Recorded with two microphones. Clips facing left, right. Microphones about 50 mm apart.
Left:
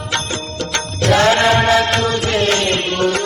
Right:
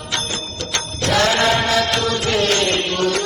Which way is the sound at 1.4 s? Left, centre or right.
Left.